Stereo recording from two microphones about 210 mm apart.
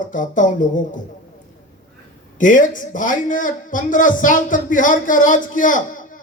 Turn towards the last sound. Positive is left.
turn(degrees=40)  # may be behind; listen again after turning